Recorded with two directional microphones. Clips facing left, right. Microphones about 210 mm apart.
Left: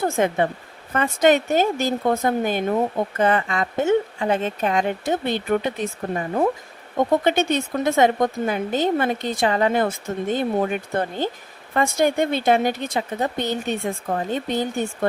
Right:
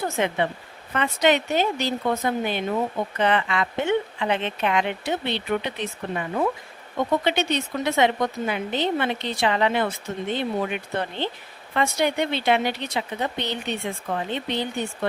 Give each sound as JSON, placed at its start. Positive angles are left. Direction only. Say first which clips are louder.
{"t": 0.0, "sound": "speech", "louder": "left 4 dB", "side_deg": 45}